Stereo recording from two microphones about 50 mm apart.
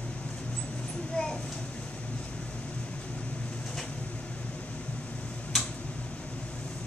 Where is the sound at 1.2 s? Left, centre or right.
Centre.